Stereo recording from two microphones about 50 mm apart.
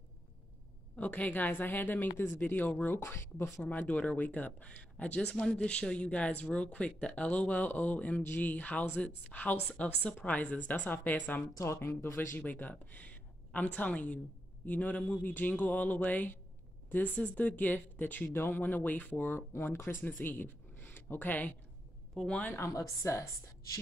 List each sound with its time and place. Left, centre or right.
0.9 s a woman's voice: left
3.0 s speech: left
3.8 s a woman's voice: left
11.5 s speech: left
12.4 s a woman's voice: left
18.3 s a woman's voice: left
19.5 s speech: left
20.1 s speech: left
22.2 s a woman's voice: centre
22.5 s a woman's voice: left